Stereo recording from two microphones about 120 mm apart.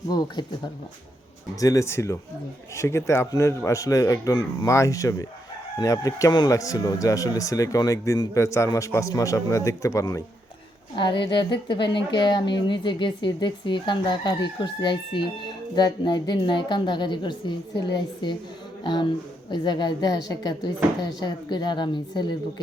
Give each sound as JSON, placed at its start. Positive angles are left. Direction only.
{"t": 0.1, "sound": "a woman's voice", "side_deg": 35}
{"t": 1.5, "sound": "speech", "side_deg": 30}
{"t": 10.9, "sound": "a woman's voice", "side_deg": 40}